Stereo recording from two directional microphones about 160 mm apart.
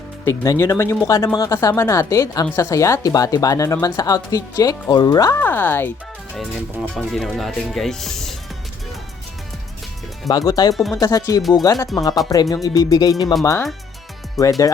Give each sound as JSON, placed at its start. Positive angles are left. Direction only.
{"t": 0.3, "sound": "speech", "side_deg": 20}
{"t": 5.4, "sound": "speech", "side_deg": 10}
{"t": 6.9, "sound": "speech", "side_deg": 0}
{"t": 10.2, "sound": "speech", "side_deg": 25}
{"t": 14.4, "sound": "speech", "side_deg": 0}